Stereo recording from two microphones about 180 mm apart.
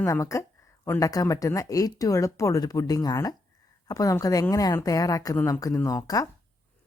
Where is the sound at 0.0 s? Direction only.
15° left (ahead or behind).